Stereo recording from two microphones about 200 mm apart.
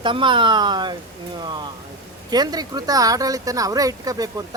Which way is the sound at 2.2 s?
20° right (ahead or behind).